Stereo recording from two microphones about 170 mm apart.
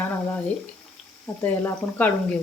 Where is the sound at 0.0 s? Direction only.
10° left (ahead or behind).